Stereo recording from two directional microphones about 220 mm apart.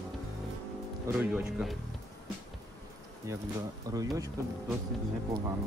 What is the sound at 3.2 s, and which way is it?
Speech, 15° right (ahead or behind).